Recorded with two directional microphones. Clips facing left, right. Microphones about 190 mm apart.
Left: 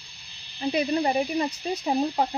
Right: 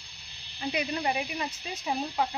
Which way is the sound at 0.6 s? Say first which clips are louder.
Left 7 dB; 30° left (ahead or behind).